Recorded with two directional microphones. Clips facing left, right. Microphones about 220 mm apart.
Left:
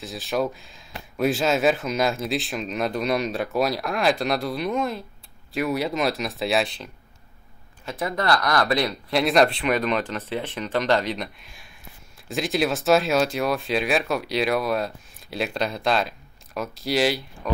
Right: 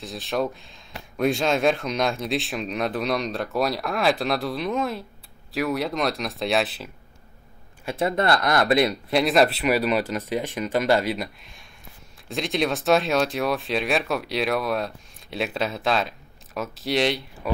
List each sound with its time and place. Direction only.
0.0 s speech: centre (ahead or behind)
7.9 s speech: 25° right (ahead or behind)
9.1 s speech: centre (ahead or behind)